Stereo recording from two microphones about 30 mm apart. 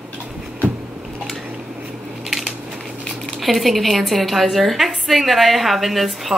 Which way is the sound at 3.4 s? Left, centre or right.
Centre.